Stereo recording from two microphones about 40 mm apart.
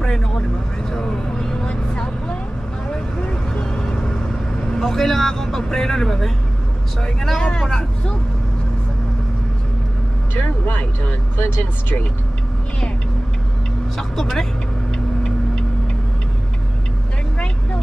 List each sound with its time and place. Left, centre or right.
0.0 s vehicle: centre
2.9 s vehicle: left
7.0 s speech: centre
10.7 s speech: left
13.9 s speech: centre